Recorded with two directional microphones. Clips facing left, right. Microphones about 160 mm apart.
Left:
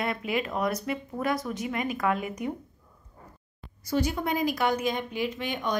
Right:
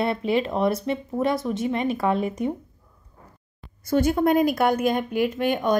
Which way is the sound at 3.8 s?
50° right (ahead or behind).